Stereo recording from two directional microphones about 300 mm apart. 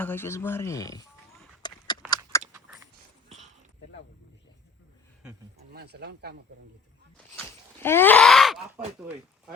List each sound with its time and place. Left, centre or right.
0.0 s speech: centre
1.6 s a sound: centre
5.7 s speech: right
7.3 s groan: centre